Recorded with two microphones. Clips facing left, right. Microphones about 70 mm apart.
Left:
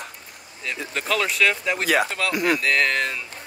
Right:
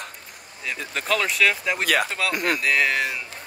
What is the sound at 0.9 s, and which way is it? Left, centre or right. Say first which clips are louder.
Speech: even; centre.